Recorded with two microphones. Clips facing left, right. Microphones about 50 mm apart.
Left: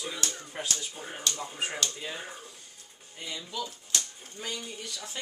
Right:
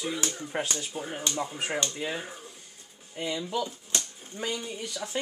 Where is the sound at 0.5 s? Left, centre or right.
Right.